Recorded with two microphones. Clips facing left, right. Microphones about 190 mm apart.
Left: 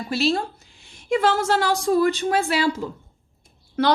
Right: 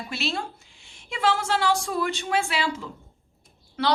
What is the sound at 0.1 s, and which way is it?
A woman's voice, 35° left (ahead or behind).